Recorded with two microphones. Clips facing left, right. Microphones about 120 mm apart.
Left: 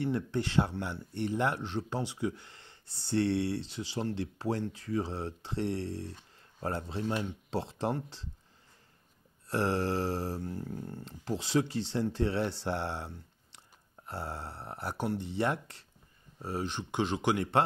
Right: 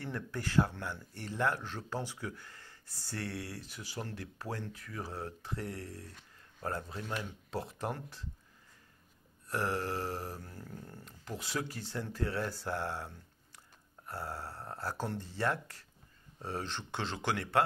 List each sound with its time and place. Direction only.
0.0 s speech: 25° left (ahead or behind)
9.5 s speech: 30° left (ahead or behind)
16.3 s speech: 10° left (ahead or behind)